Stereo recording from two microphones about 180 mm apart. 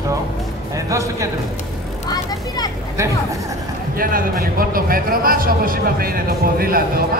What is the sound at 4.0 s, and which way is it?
A man's voice, 55° right (ahead or behind).